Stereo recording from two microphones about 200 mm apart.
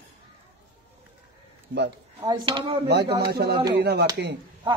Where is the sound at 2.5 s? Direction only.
25° right (ahead or behind).